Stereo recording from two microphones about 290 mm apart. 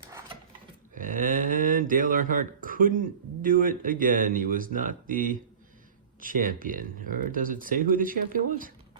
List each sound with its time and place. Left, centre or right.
0.9 s speech: right